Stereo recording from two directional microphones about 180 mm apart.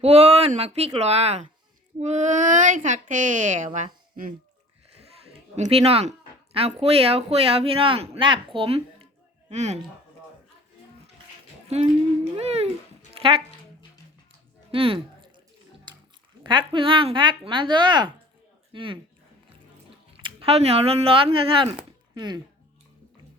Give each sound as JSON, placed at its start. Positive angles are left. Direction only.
{"t": 0.0, "sound": "speech", "side_deg": -35}
{"t": 5.5, "sound": "speech", "side_deg": -35}
{"t": 11.7, "sound": "speech", "side_deg": -35}
{"t": 14.7, "sound": "music", "side_deg": -30}
{"t": 16.4, "sound": "speech", "side_deg": -25}
{"t": 20.2, "sound": "speech", "side_deg": -30}